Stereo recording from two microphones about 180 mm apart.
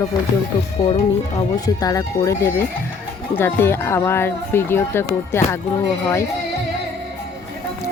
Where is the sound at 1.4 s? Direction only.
20° left (ahead or behind).